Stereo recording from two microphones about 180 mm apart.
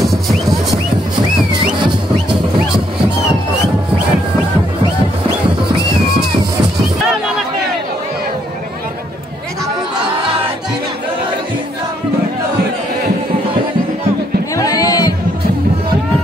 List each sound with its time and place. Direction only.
0.0 s music: centre (ahead or behind)
14.5 s music: 20° left (ahead or behind)